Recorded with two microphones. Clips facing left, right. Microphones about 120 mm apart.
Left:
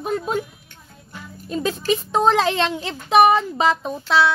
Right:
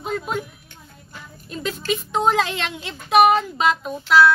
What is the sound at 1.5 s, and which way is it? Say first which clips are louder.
Speech: left 4 dB; 30° left (ahead or behind).